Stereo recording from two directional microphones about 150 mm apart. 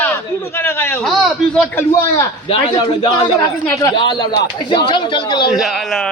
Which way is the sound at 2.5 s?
35° left (ahead or behind).